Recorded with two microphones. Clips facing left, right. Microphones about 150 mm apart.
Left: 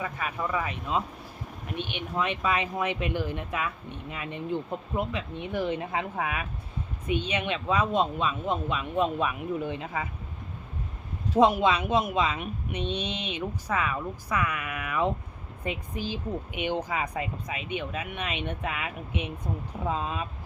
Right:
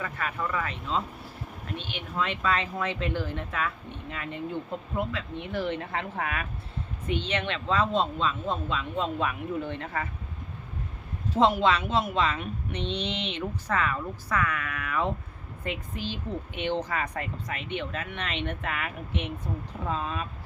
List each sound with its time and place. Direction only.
0.0 s speech: 15° left (ahead or behind)
11.3 s speech: 15° left (ahead or behind)